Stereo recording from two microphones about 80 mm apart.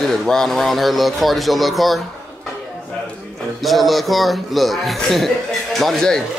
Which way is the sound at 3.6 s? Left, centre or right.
Centre.